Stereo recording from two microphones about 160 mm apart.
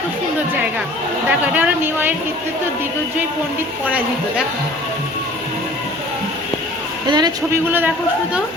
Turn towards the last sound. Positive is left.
turn(degrees=-10)  # may be behind; listen again after turning